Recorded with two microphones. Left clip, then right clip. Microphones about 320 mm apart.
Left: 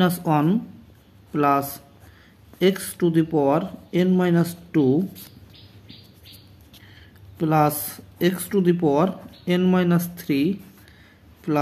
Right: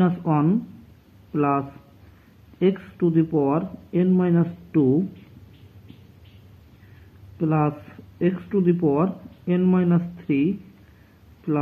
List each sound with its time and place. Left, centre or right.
0.0 s speech: centre
7.3 s speech: centre